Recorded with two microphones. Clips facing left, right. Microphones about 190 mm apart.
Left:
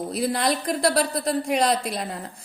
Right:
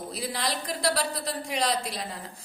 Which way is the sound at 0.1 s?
50° left (ahead or behind).